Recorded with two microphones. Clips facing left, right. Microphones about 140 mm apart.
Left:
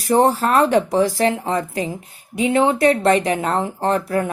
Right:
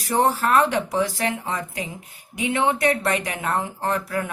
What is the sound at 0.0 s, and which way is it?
A woman's voice, 35° left (ahead or behind).